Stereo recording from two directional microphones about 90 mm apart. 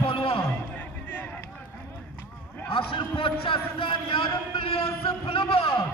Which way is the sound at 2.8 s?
75° left (ahead or behind).